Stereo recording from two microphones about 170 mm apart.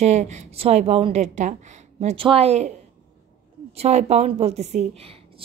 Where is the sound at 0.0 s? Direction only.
40° right (ahead or behind).